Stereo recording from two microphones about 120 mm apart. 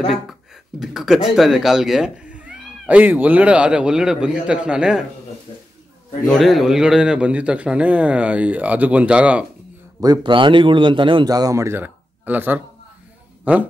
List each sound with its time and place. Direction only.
0.1 s a sound: centre (ahead or behind)
1.3 s speech: 5° right (ahead or behind)
6.2 s speech: centre (ahead or behind)
9.9 s a man's voice: 30° right (ahead or behind)
11.2 s speech: 30° right (ahead or behind); by 12.6 s 15° right (ahead or behind)
13.4 s a sound: 10° right (ahead or behind)